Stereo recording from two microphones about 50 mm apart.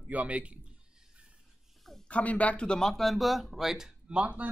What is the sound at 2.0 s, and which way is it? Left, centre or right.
Speech, left.